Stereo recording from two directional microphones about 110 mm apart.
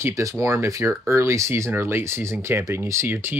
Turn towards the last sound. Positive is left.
turn(degrees=-20)  # may be behind; listen again after turning